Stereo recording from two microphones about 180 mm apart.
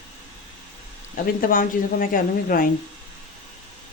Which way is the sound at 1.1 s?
50° left (ahead or behind).